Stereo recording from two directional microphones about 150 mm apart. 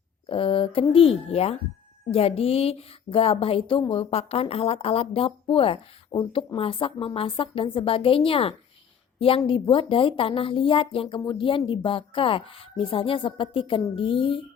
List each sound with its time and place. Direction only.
0.3 s a woman's voice: 35° left (ahead or behind)